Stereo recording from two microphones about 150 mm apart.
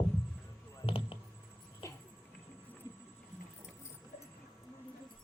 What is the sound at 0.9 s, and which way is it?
Computer keyboard, 35° left (ahead or behind).